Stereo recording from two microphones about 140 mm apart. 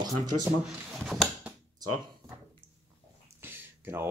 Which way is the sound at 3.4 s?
15° right (ahead or behind).